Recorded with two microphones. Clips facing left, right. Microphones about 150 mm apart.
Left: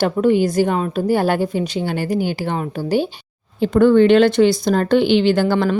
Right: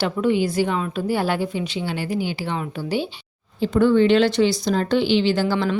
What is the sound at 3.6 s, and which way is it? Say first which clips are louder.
Speech: left 4 dB; 55° left (ahead or behind).